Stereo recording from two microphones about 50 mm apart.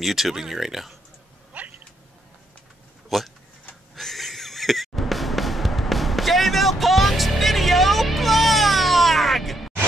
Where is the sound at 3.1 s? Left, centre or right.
Centre.